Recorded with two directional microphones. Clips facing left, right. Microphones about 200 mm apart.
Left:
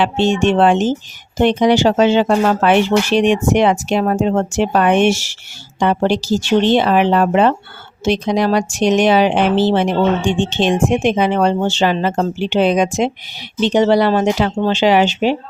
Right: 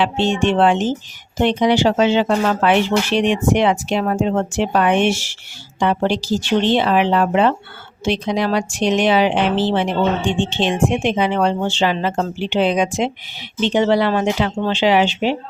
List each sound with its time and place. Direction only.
0.0 s speech: 45° left (ahead or behind)